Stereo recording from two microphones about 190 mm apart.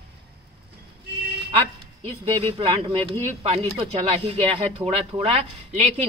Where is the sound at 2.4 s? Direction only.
30° right (ahead or behind).